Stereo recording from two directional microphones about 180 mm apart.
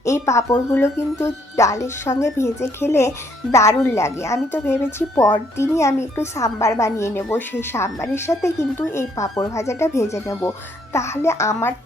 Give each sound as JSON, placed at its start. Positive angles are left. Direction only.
{"t": 0.0, "sound": "speech", "side_deg": 15}